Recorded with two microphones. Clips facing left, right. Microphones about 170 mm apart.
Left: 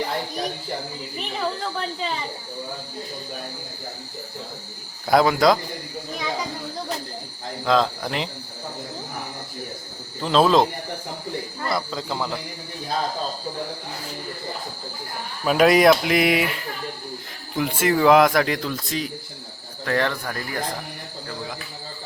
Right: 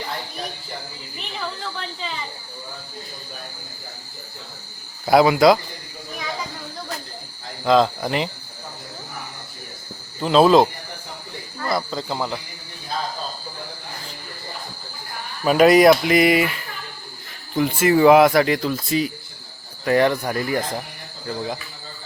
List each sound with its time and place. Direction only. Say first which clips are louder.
1.4 s a woman's voice: left 4 dB; 40° left (ahead or behind)
5.0 s speech: right 3 dB; 5° right (ahead or behind)
7.6 s speech: right 4 dB; 5° right (ahead or behind)
10.2 s speech: right 3 dB; 5° right (ahead or behind)
11.7 s speech: right 3 dB; centre (ahead or behind)
15.4 s speech: right 3 dB; centre (ahead or behind)
17.5 s speech: right 4 dB; centre (ahead or behind); by 20.6 s 20° right (ahead or behind)